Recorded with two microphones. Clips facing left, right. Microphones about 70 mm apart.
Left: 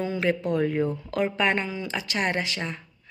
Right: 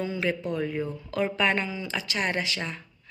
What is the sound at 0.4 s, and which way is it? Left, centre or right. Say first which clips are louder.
Speech: left 5 dB; left.